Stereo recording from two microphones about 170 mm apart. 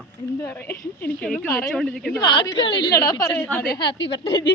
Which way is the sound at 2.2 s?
25° left (ahead or behind).